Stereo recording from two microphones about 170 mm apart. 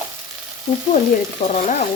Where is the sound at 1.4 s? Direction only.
40° left (ahead or behind).